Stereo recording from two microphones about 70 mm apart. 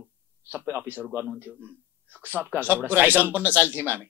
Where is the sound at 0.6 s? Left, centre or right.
Right.